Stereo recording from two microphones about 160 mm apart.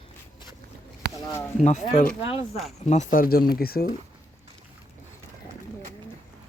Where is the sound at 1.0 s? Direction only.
85° right.